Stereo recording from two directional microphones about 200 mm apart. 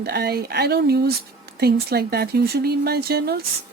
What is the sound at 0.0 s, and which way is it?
A woman's voice, 55° right (ahead or behind).